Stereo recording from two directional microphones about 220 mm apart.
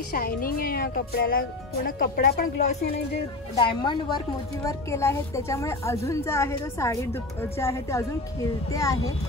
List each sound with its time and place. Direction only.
0.1 s a woman's voice: 40° left (ahead or behind)
3.5 s a woman's voice: 20° left (ahead or behind)